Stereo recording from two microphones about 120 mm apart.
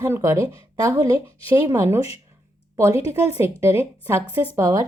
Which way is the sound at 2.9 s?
55° left (ahead or behind).